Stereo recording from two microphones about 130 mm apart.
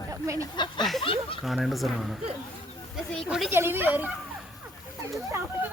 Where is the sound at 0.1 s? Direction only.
25° right (ahead or behind).